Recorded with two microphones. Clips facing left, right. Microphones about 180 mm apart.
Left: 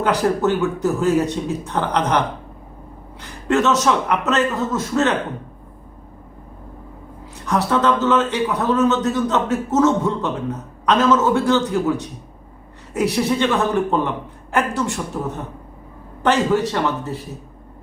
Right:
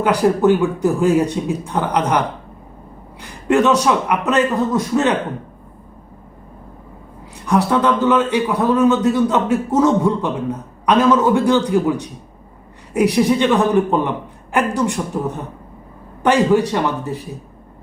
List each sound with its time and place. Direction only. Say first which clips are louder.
0.0 s speech: right 4 dB; 10° right (ahead or behind)
7.4 s speech: right 2 dB; 10° right (ahead or behind)
16.2 s speech: right 3 dB; 10° right (ahead or behind)